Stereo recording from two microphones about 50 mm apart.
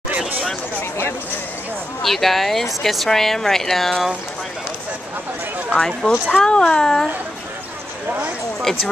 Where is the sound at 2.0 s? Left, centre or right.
Centre.